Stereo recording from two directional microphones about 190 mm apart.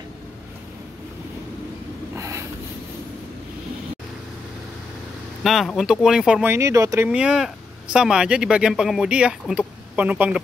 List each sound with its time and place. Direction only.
2.1 s a sound: 15° right (ahead or behind)
5.4 s speech: centre (ahead or behind); by 7.1 s 15° right (ahead or behind)
7.1 s speech: 5° right (ahead or behind)